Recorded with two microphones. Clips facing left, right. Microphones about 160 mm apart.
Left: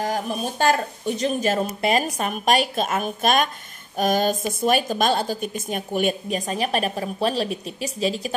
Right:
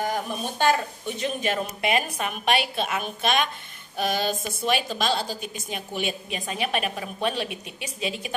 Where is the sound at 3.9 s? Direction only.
45° left (ahead or behind).